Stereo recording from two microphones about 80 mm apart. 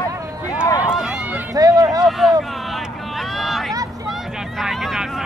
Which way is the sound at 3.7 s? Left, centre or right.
Right.